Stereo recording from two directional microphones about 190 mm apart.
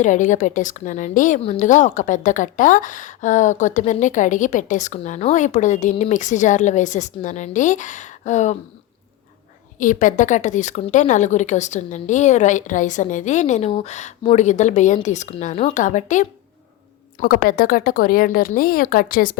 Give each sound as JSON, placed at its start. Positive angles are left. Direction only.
{"t": 0.0, "sound": "a woman's voice", "side_deg": 40}
{"t": 9.7, "sound": "a woman's voice", "side_deg": 40}
{"t": 17.2, "sound": "speech", "side_deg": 50}